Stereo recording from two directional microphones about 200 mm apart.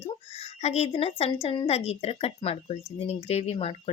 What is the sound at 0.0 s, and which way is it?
A woman's voice, 30° left (ahead or behind).